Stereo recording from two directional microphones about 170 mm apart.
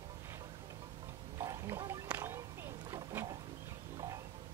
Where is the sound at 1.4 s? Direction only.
15° right (ahead or behind).